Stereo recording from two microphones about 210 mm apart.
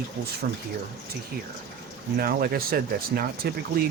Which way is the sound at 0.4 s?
45° right (ahead or behind).